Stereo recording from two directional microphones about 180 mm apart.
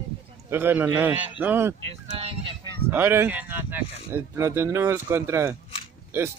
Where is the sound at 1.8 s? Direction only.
35° right (ahead or behind).